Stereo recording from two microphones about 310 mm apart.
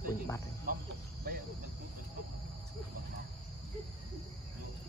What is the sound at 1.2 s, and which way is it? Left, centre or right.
Cricket, right.